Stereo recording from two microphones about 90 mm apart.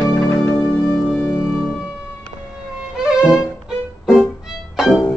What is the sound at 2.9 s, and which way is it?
Violin, 5° right (ahead or behind).